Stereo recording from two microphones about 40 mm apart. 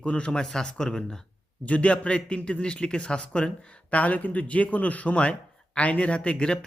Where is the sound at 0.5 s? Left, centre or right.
Centre.